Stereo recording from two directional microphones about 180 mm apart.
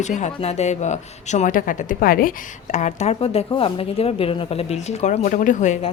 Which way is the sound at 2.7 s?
40° left (ahead or behind).